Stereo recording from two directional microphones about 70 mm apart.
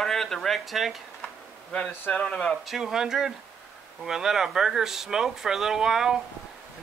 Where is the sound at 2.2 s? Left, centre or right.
Centre.